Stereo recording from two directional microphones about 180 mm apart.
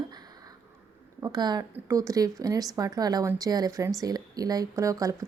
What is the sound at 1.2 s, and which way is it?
Speech, 20° right (ahead or behind).